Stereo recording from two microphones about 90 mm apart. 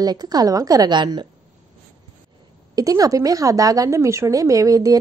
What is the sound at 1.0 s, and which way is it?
Speech, 55° right (ahead or behind).